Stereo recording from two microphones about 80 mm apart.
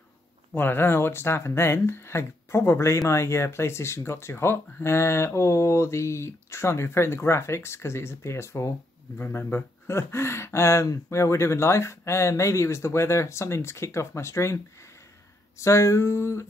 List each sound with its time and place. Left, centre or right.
0.5 s speech: left
15.6 s speech: left